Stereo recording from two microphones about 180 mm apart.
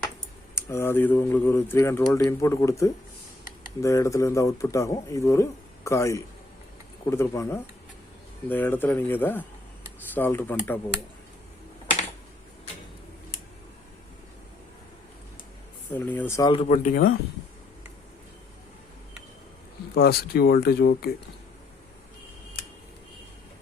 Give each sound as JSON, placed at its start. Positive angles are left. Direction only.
{"t": 0.5, "sound": "speech", "side_deg": 15}
{"t": 15.9, "sound": "speech", "side_deg": 10}
{"t": 16.5, "sound": "speech", "side_deg": 35}
{"t": 20.0, "sound": "speech", "side_deg": 60}